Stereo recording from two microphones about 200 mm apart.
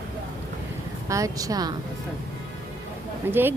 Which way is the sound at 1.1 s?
15° right (ahead or behind).